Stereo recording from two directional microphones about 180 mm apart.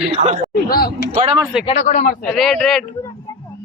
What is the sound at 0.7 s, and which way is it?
Speech, 55° left (ahead or behind).